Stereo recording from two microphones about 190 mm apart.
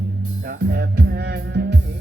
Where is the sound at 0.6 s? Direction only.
55° right (ahead or behind).